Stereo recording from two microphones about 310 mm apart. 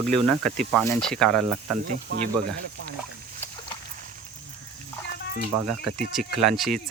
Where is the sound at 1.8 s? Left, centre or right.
Right.